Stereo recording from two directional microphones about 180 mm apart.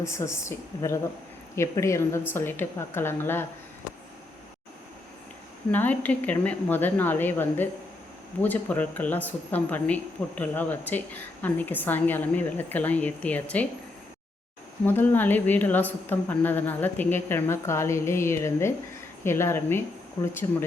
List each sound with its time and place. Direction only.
0.0 s speech: 15° left (ahead or behind)
5.7 s speech: 10° left (ahead or behind)
14.8 s speech: 10° left (ahead or behind)